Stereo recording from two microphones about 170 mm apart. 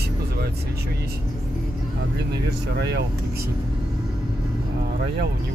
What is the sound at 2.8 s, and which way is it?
Speech, 85° right.